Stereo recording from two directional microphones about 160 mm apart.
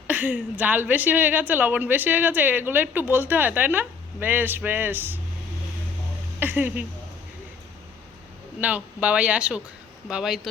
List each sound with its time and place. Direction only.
0.1 s a woman's voice: 10° right (ahead or behind)
6.4 s speech: 10° right (ahead or behind)
8.6 s a woman's voice: 10° right (ahead or behind)